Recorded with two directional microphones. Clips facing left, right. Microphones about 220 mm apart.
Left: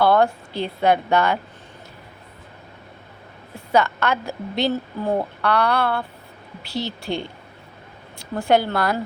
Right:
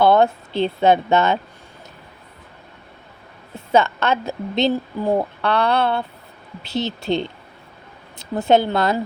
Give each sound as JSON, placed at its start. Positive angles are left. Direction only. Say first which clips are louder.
{"t": 0.0, "sound": "speech", "louder": "right 2 dB", "side_deg": -20}
{"t": 3.7, "sound": "a woman's voice", "louder": "right 2 dB", "side_deg": -25}